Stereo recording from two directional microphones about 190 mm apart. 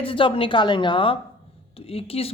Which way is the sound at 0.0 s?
25° left (ahead or behind).